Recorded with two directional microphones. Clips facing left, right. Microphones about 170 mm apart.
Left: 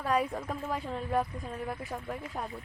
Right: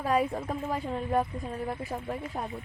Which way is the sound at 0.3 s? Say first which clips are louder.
Right 3 dB; 25° right (ahead or behind).